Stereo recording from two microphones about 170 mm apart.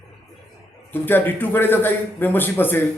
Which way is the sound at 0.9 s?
10° left (ahead or behind).